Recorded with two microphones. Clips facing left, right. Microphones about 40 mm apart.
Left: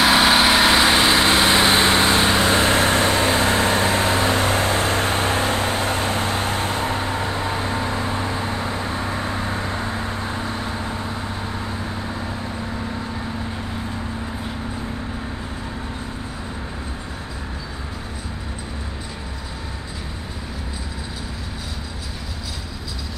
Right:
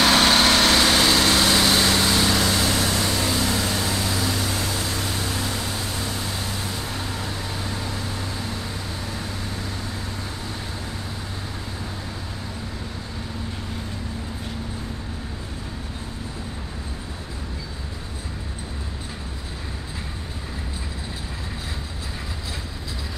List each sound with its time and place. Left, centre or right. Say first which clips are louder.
0.0 s vehicle: left 2 dB; centre; by 11.0 s left